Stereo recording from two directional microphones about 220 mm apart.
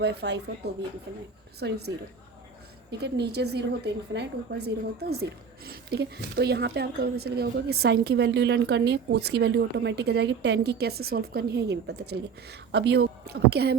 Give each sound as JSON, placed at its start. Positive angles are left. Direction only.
{"t": 0.0, "sound": "a woman's voice", "side_deg": -50}
{"t": 3.0, "sound": "a woman's voice", "side_deg": -50}